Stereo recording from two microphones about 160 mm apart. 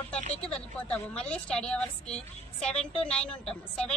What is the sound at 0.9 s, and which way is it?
A woman's voice, 5° left (ahead or behind).